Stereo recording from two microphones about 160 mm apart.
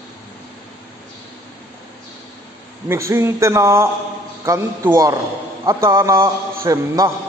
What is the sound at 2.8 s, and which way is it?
A man's voice, 15° right (ahead or behind).